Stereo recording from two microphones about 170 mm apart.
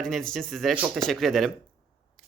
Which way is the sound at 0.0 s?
5° left (ahead or behind).